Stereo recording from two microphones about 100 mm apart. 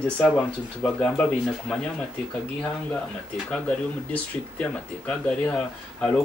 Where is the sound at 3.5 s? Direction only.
10° left (ahead or behind).